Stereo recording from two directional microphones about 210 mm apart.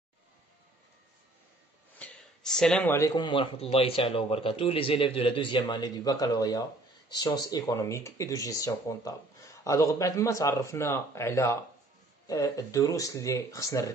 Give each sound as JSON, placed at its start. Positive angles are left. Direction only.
{"t": 2.0, "sound": "speech", "side_deg": 5}